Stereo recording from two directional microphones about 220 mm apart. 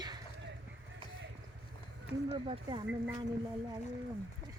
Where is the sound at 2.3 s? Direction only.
20° right (ahead or behind).